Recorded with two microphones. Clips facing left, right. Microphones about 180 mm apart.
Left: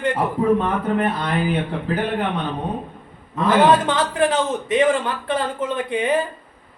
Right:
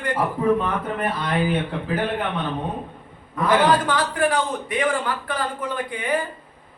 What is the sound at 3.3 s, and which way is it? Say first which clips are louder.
A man's voice: left 3 dB; 25° left (ahead or behind).